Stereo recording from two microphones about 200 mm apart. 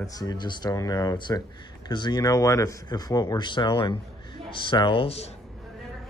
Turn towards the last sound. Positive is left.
turn(degrees=30)  # may be behind; listen again after turning